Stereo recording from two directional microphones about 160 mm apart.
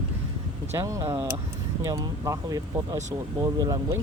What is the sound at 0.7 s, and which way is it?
Speech, 20° right (ahead or behind).